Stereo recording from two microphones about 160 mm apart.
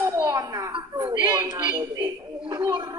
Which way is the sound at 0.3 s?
25° right (ahead or behind).